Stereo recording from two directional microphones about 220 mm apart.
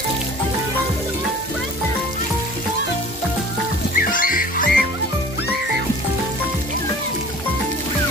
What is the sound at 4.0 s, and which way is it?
Music, 40° left (ahead or behind).